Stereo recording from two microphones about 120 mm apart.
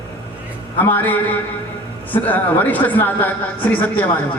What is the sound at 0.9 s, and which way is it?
A man's voice, 15° left (ahead or behind).